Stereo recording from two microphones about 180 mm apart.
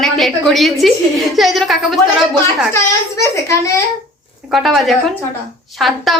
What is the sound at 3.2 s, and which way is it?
Speech, 15° left (ahead or behind).